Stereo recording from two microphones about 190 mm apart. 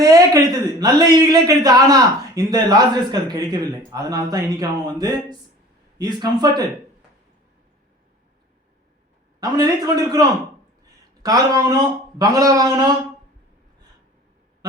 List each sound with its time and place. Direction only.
0.0 s a man's voice: 20° right (ahead or behind)
9.4 s a man's voice: 20° right (ahead or behind)